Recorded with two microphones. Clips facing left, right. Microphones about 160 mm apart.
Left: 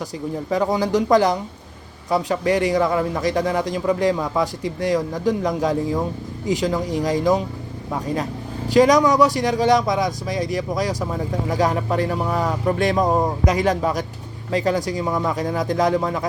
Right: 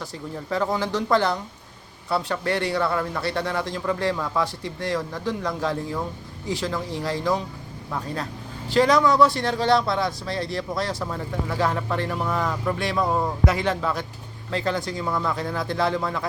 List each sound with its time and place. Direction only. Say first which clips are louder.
0.5 s a man's voice: left 5 dB; 15° left (ahead or behind)
12.6 s speech: left 8 dB; 45° left (ahead or behind)
13.1 s speech: left 5 dB; 20° left (ahead or behind)
14.5 s a man's voice: left 5 dB; 10° left (ahead or behind)